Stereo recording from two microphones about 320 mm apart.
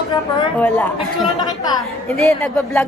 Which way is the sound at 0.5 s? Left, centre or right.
Centre.